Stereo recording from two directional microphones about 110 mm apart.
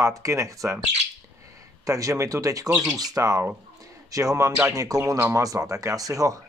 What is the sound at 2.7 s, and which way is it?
Speech, 5° right (ahead or behind).